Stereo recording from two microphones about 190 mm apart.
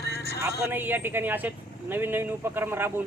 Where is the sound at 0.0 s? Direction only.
60° left (ahead or behind).